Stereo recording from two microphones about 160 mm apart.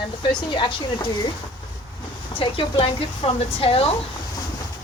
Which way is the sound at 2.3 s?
35° left (ahead or behind).